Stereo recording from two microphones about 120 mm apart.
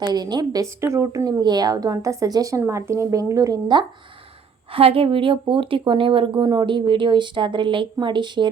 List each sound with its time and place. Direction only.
0.0 s a woman's voice: 35° right (ahead or behind)
4.7 s speech: 50° right (ahead or behind)